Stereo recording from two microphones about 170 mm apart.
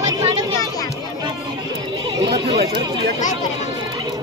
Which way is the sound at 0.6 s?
20° left (ahead or behind).